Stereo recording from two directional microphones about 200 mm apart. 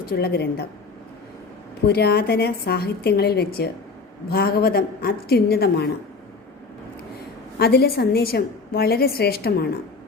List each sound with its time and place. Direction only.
0.0 s a woman's voice: 50° left (ahead or behind)
1.9 s a woman's voice: 50° left (ahead or behind)
7.6 s a woman's voice: 50° left (ahead or behind)